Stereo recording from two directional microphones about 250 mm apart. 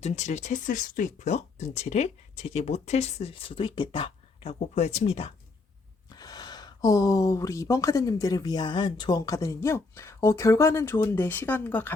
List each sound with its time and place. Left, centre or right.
0.0 s speech: left; by 11.9 s centre